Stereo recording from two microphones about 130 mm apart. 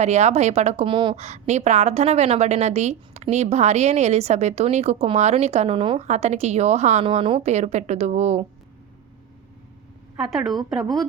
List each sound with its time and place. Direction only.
0.0 s a woman's voice: 60° right (ahead or behind)
0.9 s speech: 40° right (ahead or behind)
1.1 s a woman's voice: 55° right (ahead or behind); by 6.0 s 40° right (ahead or behind)
6.0 s a woman's voice: 60° right (ahead or behind)
7.0 s a woman's voice: 45° right (ahead or behind)
10.2 s a woman's voice: centre (ahead or behind)